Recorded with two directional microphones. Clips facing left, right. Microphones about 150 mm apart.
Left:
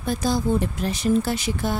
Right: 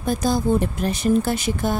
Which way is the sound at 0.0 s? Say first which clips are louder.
Right 2 dB; 45° right (ahead or behind).